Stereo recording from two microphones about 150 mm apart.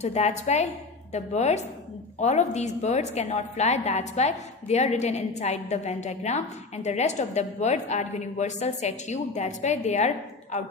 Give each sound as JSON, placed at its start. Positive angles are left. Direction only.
{"t": 0.0, "sound": "a woman's voice", "side_deg": 50}